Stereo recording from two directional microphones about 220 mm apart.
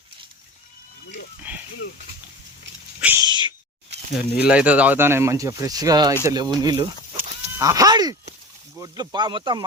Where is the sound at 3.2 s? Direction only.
20° right (ahead or behind).